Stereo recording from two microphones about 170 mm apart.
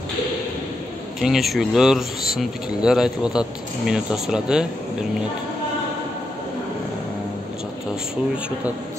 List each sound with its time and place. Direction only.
1.2 s speech: centre (ahead or behind)